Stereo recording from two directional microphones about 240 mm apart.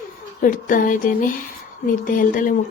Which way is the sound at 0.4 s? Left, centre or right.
Left.